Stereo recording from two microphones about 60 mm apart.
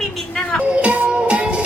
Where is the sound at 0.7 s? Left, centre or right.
Right.